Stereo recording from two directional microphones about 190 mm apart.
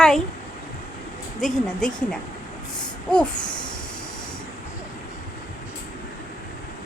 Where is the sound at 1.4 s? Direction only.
Centre (ahead or behind).